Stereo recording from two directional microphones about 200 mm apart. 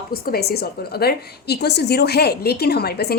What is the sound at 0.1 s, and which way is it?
A woman's voice, 50° left (ahead or behind).